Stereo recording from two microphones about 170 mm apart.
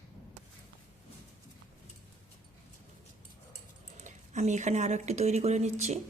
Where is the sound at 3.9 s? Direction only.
45° right (ahead or behind).